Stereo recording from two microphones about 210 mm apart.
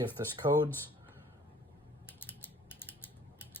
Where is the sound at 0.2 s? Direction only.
15° right (ahead or behind).